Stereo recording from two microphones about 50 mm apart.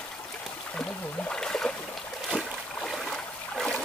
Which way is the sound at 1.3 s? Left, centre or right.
Centre.